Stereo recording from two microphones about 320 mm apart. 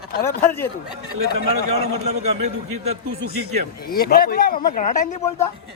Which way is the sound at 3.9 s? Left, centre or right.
Left.